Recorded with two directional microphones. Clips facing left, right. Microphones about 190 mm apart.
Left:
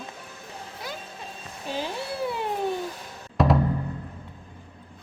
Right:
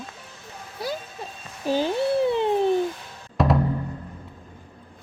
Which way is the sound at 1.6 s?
30° right (ahead or behind).